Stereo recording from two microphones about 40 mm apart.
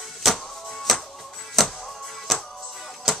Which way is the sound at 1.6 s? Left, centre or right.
Centre.